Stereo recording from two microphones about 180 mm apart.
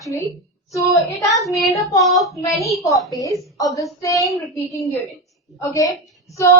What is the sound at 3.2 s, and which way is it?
A woman's voice, 20° left (ahead or behind).